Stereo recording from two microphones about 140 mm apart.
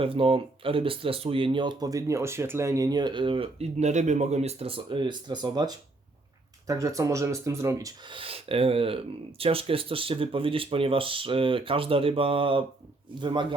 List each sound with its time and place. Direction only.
0.0 s speech: 40° right (ahead or behind); by 8.1 s 25° right (ahead or behind)
8.1 s speech: 40° right (ahead or behind)